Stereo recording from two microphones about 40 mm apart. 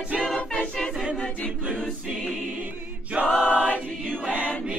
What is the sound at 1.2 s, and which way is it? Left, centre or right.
A capella, left.